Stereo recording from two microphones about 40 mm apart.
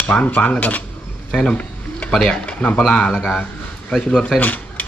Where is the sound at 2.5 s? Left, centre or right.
Left.